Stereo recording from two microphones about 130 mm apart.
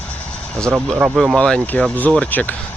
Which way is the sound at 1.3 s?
10° left (ahead or behind).